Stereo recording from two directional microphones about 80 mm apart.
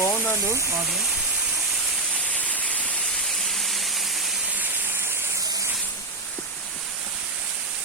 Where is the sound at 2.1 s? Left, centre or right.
Centre.